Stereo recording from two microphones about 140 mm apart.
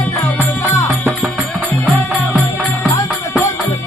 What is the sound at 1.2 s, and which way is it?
Music, 10° left (ahead or behind).